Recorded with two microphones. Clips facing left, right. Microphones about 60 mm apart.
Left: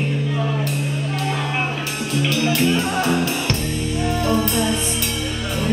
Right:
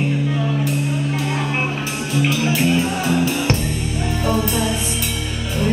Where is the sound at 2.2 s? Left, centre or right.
Centre.